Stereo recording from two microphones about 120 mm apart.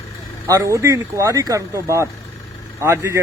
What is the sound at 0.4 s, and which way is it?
Speech, 25° right (ahead or behind).